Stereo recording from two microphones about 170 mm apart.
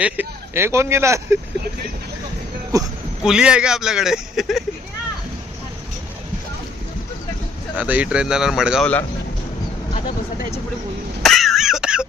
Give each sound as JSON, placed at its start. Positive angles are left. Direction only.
{"t": 0.0, "sound": "speech", "side_deg": -10}
{"t": 2.7, "sound": "speech", "side_deg": -20}
{"t": 3.2, "sound": "speech", "side_deg": -5}
{"t": 7.8, "sound": "speech", "side_deg": -5}
{"t": 11.2, "sound": "throat clearing", "side_deg": 0}